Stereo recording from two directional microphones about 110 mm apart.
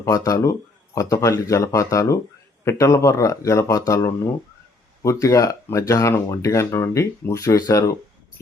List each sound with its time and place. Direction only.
0.0 s speech: 30° left (ahead or behind)